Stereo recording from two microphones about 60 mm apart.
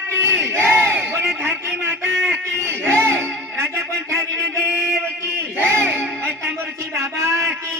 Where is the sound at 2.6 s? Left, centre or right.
Right.